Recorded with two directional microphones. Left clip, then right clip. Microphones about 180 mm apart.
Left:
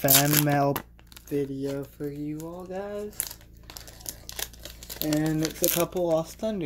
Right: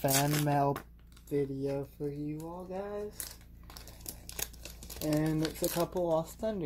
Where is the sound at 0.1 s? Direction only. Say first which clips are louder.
Left 8 dB; 50° left (ahead or behind).